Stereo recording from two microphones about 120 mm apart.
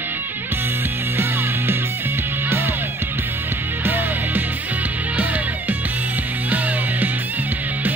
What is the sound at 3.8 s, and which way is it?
Music, 15° right (ahead or behind).